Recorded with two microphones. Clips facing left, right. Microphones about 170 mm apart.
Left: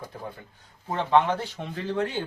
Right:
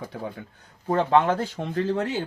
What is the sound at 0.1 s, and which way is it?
Speech, 90° right.